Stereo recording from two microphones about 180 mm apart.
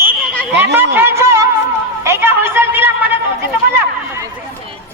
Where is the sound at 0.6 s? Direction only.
10° right (ahead or behind).